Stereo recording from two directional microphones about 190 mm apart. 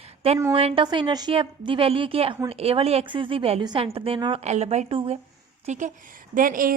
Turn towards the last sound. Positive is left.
turn(degrees=-45)  # may be behind; listen again after turning